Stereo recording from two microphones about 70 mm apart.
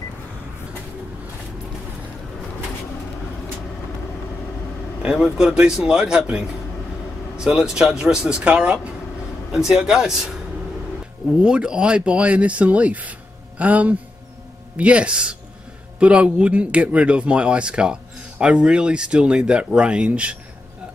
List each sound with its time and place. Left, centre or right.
5.0 s speech: centre
11.3 s a man's voice: centre